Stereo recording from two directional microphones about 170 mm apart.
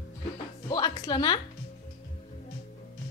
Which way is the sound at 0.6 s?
25° left (ahead or behind).